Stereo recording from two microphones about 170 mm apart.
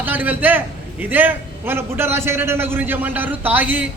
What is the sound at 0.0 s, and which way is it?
A man's voice, 10° right (ahead or behind).